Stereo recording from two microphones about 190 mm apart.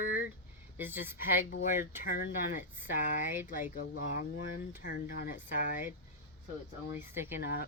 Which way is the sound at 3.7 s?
55° left (ahead or behind).